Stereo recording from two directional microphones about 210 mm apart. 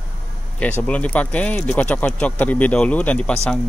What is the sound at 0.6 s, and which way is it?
Speech, 5° left (ahead or behind).